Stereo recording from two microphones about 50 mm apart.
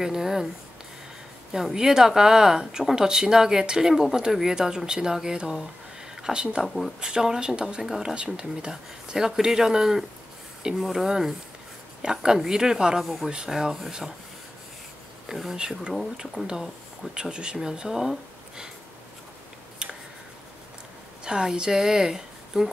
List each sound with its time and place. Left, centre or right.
0.0 s speech: centre
1.5 s speech: centre
6.6 s speech: centre
7.0 s speech: centre
13.0 s speech: centre
13.3 s speech: centre
15.2 s speech: centre
17.1 s speech: centre
21.2 s speech: centre